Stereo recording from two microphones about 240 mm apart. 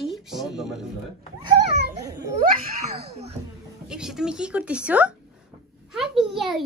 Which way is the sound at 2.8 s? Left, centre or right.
Right.